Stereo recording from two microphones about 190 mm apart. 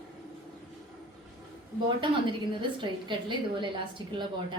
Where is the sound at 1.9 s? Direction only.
25° right (ahead or behind).